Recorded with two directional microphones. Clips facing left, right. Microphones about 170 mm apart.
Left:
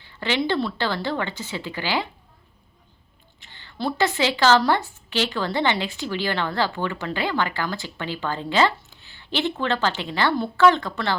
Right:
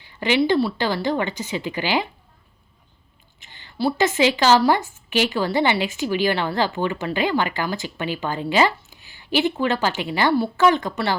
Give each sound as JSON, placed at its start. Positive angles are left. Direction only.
{"t": 0.0, "sound": "speech", "side_deg": -15}
{"t": 3.4, "sound": "a sound", "side_deg": -20}
{"t": 3.9, "sound": "speech", "side_deg": -20}